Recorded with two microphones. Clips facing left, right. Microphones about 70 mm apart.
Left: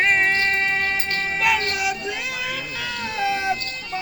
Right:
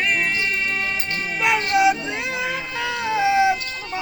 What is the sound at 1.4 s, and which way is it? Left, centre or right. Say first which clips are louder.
Music: right 5 dB; right.